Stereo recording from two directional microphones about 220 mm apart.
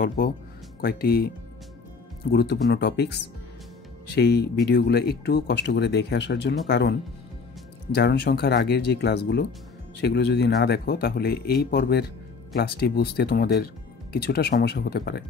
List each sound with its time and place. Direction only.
0.2 s speech: 40° left (ahead or behind)
2.3 s speech: 50° left (ahead or behind)